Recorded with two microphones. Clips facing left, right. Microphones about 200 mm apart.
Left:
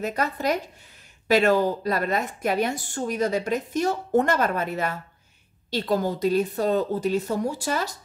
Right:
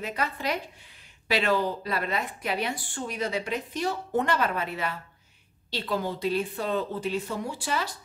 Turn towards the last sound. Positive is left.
turn(degrees=45)  # may be behind; listen again after turning